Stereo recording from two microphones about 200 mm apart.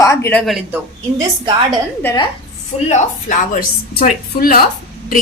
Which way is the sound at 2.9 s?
40° left (ahead or behind).